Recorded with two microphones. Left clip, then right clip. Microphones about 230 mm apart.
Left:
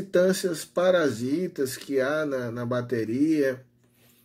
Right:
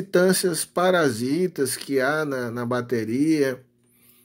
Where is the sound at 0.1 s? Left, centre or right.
Right.